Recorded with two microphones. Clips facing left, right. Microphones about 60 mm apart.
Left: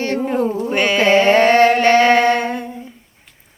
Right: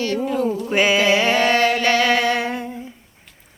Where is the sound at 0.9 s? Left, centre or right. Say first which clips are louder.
Left 5 dB; left.